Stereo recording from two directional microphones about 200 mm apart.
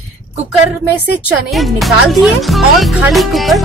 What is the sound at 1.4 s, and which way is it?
Speech, centre (ahead or behind).